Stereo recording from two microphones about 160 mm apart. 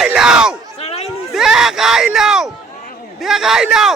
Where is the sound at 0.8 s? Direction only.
40° left (ahead or behind).